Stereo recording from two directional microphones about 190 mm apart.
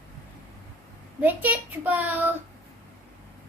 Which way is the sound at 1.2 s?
10° right (ahead or behind).